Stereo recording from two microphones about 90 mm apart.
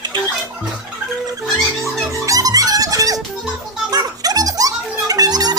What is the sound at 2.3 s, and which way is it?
Music, 40° right (ahead or behind).